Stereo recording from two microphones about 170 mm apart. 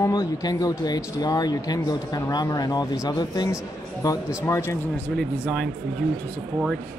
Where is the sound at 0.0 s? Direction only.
20° left (ahead or behind).